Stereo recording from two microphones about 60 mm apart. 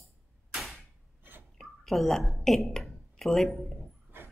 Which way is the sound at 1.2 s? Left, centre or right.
Right.